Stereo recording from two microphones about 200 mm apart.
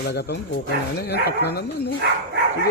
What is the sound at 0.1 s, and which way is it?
Speech, 55° left (ahead or behind).